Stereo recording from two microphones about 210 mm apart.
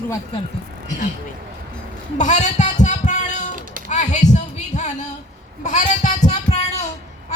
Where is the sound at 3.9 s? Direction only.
35° left (ahead or behind).